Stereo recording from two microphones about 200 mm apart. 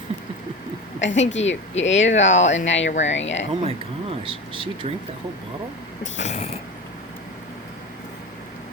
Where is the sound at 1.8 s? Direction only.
65° left (ahead or behind).